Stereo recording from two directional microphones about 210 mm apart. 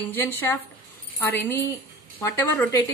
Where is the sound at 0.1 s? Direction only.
10° left (ahead or behind).